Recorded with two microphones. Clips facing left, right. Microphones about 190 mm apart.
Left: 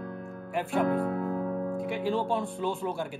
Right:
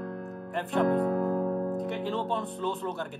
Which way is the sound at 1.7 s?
5° left (ahead or behind).